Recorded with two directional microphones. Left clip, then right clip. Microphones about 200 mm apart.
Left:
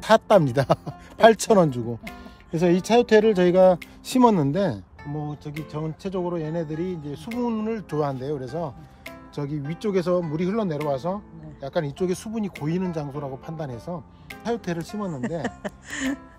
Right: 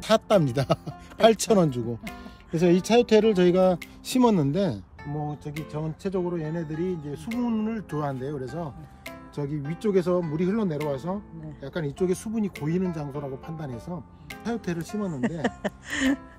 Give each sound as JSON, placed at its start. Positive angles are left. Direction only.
{"t": 0.0, "sound": "speech", "side_deg": 0}
{"t": 5.2, "sound": "speech", "side_deg": 15}
{"t": 15.4, "sound": "speech", "side_deg": 0}